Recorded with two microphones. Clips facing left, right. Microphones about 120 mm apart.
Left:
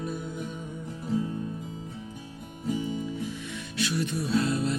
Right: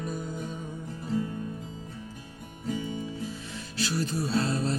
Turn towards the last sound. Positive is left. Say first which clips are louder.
# left 1 dB
turn(degrees=-35)  # may be behind; listen again after turning